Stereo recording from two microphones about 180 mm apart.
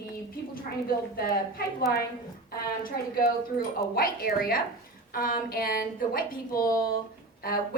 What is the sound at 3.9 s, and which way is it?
A woman's voice, 55° left (ahead or behind).